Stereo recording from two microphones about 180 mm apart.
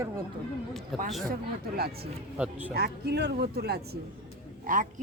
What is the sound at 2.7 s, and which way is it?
Speech, 65° right (ahead or behind).